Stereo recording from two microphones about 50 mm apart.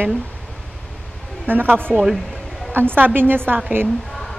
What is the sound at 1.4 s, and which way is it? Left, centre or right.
A woman's voice, right.